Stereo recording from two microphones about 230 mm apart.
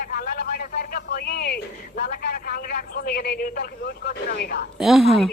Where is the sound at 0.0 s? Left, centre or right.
Left.